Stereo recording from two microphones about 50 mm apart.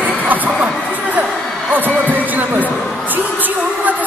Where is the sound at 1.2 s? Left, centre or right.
Right.